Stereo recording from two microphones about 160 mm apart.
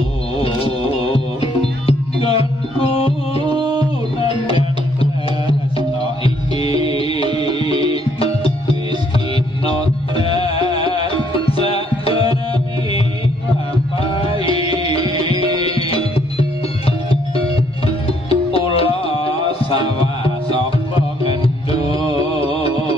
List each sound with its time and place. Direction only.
0.4 s music: 35° left (ahead or behind)
3.4 s music: 30° right (ahead or behind)
4.2 s music: 35° left (ahead or behind)
6.2 s music: 35° left (ahead or behind)
10.1 s music: 35° left (ahead or behind)
14.4 s music: 35° left (ahead or behind)
22.1 s music: 35° left (ahead or behind)